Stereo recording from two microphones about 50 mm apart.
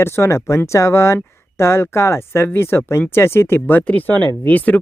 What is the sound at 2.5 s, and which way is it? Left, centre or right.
Speech, left.